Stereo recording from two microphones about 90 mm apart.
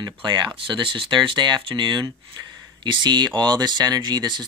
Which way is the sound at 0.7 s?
70° right (ahead or behind).